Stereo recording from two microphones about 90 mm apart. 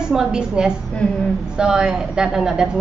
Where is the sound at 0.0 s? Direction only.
5° right (ahead or behind).